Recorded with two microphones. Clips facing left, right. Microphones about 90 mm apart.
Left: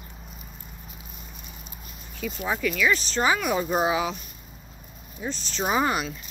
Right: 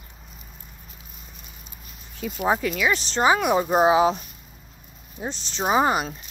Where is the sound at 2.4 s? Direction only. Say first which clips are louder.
Right 2 dB; 35° right (ahead or behind).